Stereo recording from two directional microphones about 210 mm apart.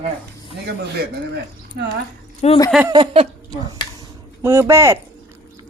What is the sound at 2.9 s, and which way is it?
Speech, 25° right (ahead or behind).